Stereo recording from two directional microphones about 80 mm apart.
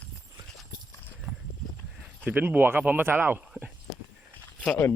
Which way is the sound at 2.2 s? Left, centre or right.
Right.